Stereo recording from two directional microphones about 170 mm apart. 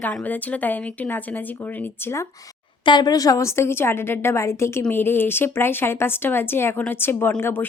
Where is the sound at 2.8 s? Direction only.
25° left (ahead or behind).